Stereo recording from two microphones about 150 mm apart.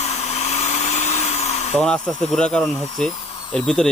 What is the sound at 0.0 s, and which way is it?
Vacuum cleaner, 50° left (ahead or behind).